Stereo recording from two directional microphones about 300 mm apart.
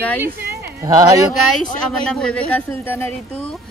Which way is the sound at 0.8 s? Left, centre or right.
Centre.